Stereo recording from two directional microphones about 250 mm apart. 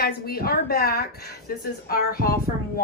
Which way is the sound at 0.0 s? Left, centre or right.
Left.